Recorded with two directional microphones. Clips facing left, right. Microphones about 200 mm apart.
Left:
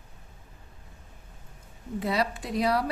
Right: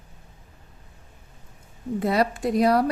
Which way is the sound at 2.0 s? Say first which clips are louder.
Right 6 dB; 50° right (ahead or behind).